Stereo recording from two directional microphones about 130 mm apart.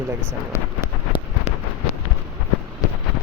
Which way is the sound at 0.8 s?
40° left (ahead or behind).